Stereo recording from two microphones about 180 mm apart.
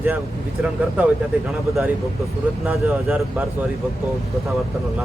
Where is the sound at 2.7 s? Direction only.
5° right (ahead or behind).